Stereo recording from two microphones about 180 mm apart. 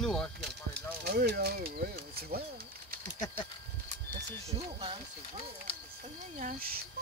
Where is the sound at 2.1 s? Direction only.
60° right (ahead or behind).